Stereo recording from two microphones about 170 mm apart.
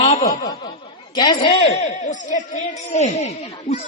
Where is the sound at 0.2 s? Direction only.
20° left (ahead or behind).